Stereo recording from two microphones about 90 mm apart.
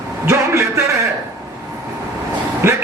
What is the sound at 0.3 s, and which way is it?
Speech, 30° right (ahead or behind).